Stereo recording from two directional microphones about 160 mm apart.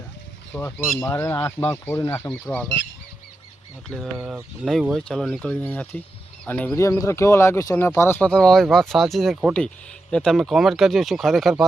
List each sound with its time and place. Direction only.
0.5 s speech: 15° left (ahead or behind)
3.8 s speech: centre (ahead or behind)